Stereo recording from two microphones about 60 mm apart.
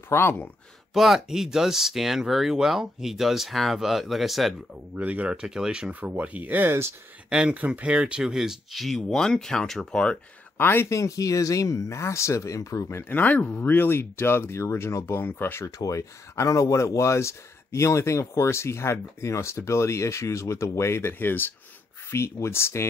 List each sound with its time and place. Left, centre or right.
0.1 s speech: left
0.9 s speech: centre
4.9 s speech: right
7.2 s speech: centre
8.8 s speech: centre
10.6 s speech: left
10.9 s speech: left
13.1 s speech: left
15.2 s speech: left
15.6 s speech: left
21.1 s speech: left
22.1 s speech: left